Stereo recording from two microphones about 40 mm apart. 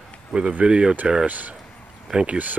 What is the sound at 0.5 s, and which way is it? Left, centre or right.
Speech, right.